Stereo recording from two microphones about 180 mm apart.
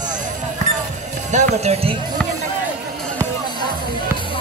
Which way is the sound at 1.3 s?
40° right (ahead or behind).